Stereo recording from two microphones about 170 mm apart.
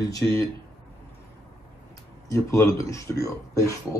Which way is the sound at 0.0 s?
20° left (ahead or behind).